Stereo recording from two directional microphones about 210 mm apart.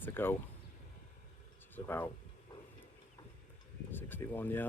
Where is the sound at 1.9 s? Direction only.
10° left (ahead or behind).